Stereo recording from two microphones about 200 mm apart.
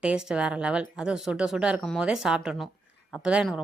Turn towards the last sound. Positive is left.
turn(degrees=-5)  # may be behind; listen again after turning